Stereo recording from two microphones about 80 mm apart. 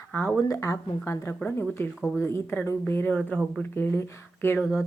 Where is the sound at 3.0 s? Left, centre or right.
Centre.